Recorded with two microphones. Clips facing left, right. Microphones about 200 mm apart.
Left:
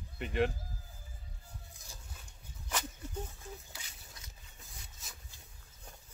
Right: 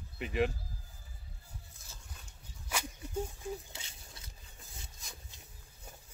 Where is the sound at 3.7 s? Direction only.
30° right (ahead or behind).